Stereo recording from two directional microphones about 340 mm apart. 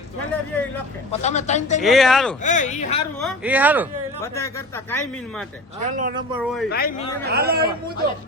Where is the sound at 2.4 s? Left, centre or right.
Left.